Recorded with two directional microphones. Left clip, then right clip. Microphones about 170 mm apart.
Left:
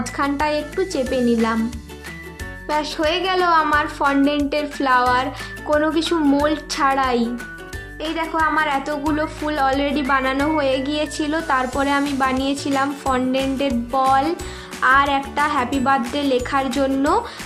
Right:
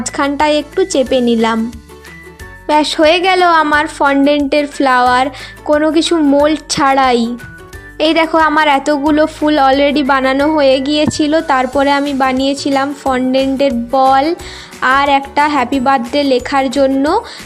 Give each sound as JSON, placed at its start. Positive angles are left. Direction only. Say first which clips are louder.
{"t": 0.0, "sound": "a woman's voice", "louder": "right 7 dB", "side_deg": -45}
{"t": 2.6, "sound": "a woman's voice", "louder": "right 11 dB", "side_deg": -45}
{"t": 7.9, "sound": "a woman's voice", "louder": "right 11 dB", "side_deg": -55}